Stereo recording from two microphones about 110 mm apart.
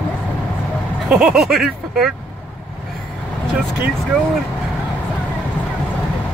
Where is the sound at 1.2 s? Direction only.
5° right (ahead or behind).